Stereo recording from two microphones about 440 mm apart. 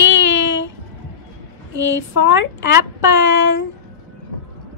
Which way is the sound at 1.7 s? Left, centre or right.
Left.